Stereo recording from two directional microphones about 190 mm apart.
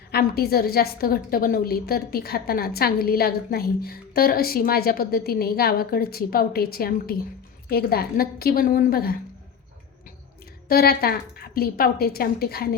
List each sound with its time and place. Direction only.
0.1 s a woman's voice: 55° left (ahead or behind)
10.7 s a woman's voice: 55° left (ahead or behind)